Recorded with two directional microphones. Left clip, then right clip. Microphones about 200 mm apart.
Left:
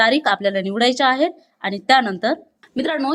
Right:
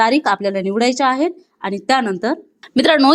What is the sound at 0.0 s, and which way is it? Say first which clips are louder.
A woman's voice: right 1 dB; 10° right (ahead or behind).